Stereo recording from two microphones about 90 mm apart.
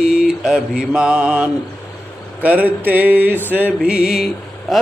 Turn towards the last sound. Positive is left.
turn(degrees=0)  # may be behind; listen again after turning